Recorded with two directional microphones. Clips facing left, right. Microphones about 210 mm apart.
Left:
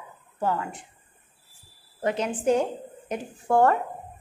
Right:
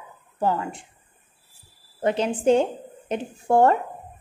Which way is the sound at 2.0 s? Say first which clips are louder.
Right 4 dB; 30° right (ahead or behind).